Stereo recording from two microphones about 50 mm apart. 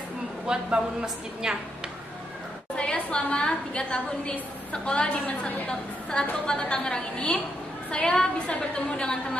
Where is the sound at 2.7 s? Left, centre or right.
Centre.